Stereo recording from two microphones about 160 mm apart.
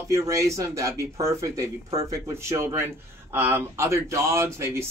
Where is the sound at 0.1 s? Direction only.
20° right (ahead or behind).